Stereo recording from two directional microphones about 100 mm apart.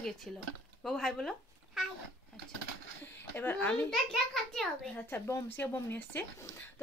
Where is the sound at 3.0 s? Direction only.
20° left (ahead or behind).